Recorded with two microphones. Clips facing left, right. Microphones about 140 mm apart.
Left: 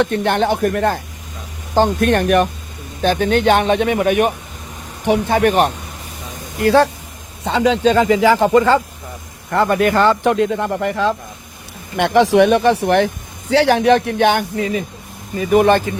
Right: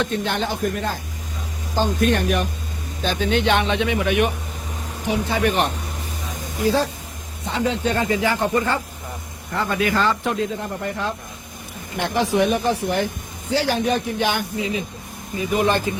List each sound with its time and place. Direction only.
0.0 s speech: 60° left (ahead or behind)
5.0 s speech: 60° left (ahead or behind)
6.6 s speech: 70° left (ahead or behind)
7.4 s speech: 90° left
9.5 s speech: 65° left (ahead or behind); by 11.1 s 90° left
11.9 s speech: 80° left; by 15.8 s 55° left (ahead or behind)